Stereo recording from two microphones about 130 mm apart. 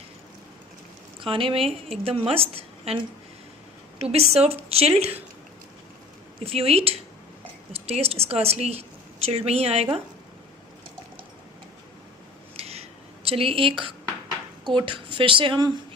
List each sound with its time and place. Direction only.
1.2 s a woman's voice: 45° right (ahead or behind)
6.4 s a woman's voice: 50° right (ahead or behind)
12.5 s a sound: 55° right (ahead or behind)
13.2 s a woman's voice: 45° right (ahead or behind)